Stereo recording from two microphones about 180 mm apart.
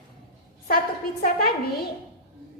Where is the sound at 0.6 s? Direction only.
55° left (ahead or behind).